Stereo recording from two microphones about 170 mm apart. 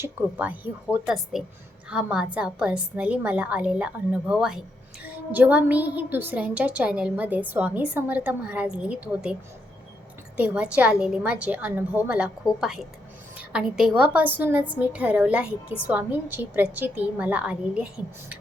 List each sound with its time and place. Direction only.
0.0 s a woman's voice: 10° right (ahead or behind)
10.3 s a woman's voice: 5° right (ahead or behind)